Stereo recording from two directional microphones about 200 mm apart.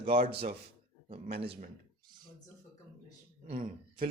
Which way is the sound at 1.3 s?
55° right (ahead or behind).